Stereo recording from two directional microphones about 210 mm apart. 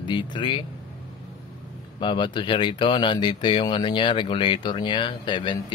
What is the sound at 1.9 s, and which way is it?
Speech, 20° left (ahead or behind).